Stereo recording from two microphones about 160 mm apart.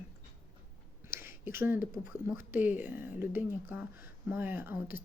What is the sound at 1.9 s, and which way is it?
Speech, 15° right (ahead or behind).